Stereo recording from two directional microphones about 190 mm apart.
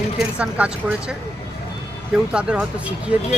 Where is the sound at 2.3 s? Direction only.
5° right (ahead or behind).